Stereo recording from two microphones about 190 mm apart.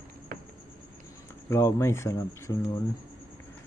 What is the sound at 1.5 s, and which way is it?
Speech, 15° left (ahead or behind).